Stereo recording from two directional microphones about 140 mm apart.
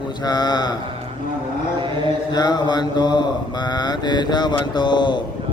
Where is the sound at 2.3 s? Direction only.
30° left (ahead or behind).